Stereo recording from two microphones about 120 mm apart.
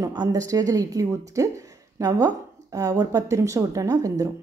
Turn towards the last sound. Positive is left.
turn(degrees=-25)  # may be behind; listen again after turning